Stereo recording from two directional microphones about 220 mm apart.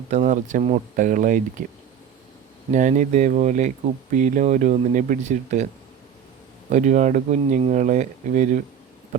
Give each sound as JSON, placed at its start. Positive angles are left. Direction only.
{"t": 0.1, "sound": "speech", "side_deg": -35}
{"t": 6.7, "sound": "speech", "side_deg": -35}